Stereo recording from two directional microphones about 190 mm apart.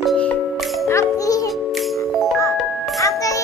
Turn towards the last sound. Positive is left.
turn(degrees=15)  # may be behind; listen again after turning